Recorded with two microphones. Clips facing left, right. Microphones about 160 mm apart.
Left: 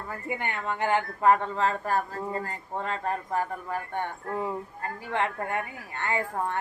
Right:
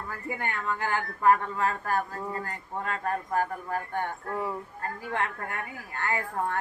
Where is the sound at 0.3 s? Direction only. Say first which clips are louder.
Even; 20° left (ahead or behind).